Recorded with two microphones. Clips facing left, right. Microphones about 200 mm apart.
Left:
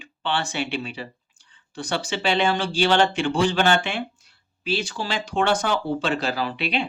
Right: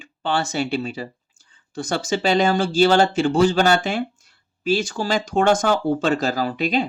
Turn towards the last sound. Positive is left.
turn(degrees=-40)  # may be behind; listen again after turning